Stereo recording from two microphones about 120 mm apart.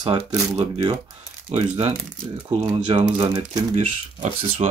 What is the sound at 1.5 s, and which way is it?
Speech, 65° right (ahead or behind).